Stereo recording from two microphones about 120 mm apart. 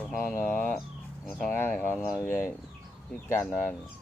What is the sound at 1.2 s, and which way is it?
Music, centre (ahead or behind).